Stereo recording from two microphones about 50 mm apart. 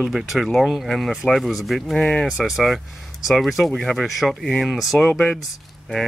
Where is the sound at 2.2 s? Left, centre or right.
Centre.